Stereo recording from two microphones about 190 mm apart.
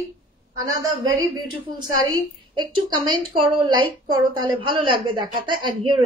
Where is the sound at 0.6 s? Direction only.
20° right (ahead or behind).